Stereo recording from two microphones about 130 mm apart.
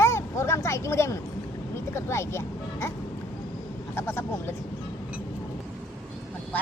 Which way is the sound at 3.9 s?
15° left (ahead or behind).